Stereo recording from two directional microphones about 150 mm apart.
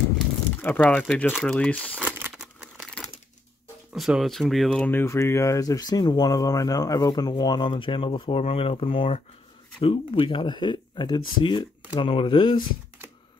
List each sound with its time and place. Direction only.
0.6 s speech: 10° left (ahead or behind)
2.0 s a sound: 15° right (ahead or behind)
2.3 s crumpling: 5° right (ahead or behind)
3.9 s speech: centre (ahead or behind); by 12.6 s 35° left (ahead or behind)